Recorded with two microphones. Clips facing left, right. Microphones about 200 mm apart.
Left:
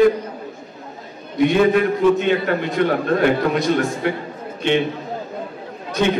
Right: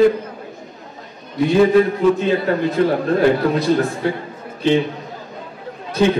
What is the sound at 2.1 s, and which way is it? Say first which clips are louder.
A man's voice: right 1 dB; 35° right (ahead or behind).